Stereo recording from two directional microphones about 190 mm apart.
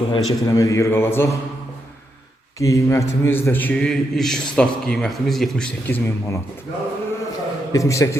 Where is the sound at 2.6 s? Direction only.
15° left (ahead or behind).